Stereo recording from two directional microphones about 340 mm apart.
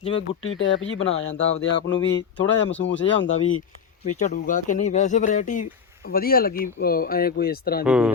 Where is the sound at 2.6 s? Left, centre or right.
Left.